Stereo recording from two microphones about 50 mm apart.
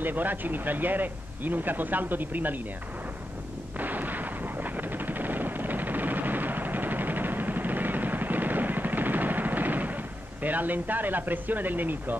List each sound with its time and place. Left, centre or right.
0.0 s speech: right
3.8 s artillery fire: right
4.7 s a sound: right
10.4 s speech: right